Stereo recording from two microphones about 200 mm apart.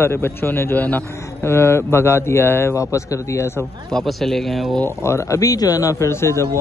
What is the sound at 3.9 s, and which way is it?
Speech, centre (ahead or behind).